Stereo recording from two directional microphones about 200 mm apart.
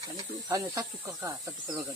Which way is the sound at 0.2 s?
20° right (ahead or behind).